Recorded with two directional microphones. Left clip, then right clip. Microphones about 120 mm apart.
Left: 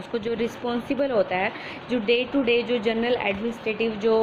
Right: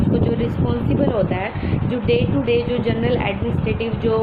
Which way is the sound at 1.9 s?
55° left (ahead or behind).